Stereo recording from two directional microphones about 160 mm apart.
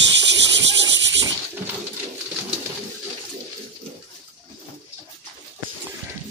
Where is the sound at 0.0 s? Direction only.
90° right.